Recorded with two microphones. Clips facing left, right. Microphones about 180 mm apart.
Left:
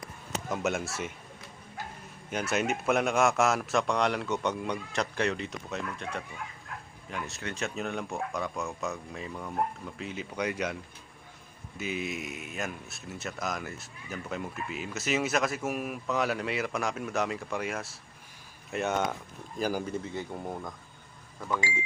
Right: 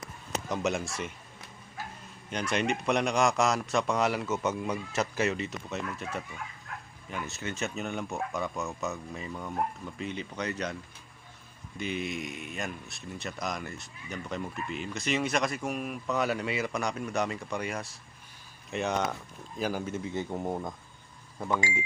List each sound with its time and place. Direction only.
0.4 s speech: centre (ahead or behind)
2.3 s speech: 5° left (ahead or behind)
11.8 s speech: 5° left (ahead or behind)
20.1 s speech: 20° right (ahead or behind)